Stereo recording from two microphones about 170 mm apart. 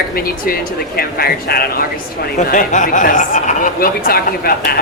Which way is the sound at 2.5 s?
50° left (ahead or behind).